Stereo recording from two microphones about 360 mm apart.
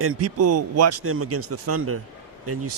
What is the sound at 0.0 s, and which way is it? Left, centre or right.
Speech, right.